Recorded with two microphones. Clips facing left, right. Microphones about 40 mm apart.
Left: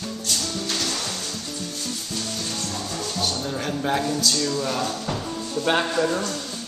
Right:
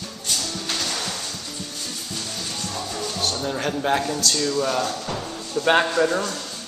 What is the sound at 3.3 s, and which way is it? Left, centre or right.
A man's voice, centre.